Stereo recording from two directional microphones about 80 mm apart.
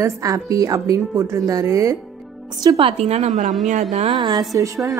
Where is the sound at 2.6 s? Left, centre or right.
Right.